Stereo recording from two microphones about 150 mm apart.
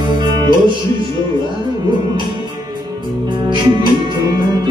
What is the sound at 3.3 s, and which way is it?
Music, 30° right (ahead or behind).